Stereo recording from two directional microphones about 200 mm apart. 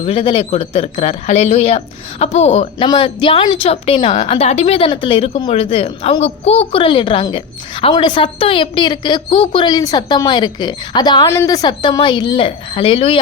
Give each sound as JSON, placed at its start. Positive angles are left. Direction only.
{"t": 0.0, "sound": "speech", "side_deg": 25}